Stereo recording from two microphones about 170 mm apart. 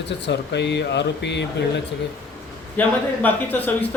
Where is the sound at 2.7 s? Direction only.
10° left (ahead or behind).